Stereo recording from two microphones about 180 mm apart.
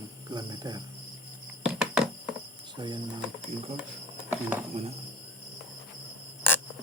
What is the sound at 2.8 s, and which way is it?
Speech, 25° right (ahead or behind).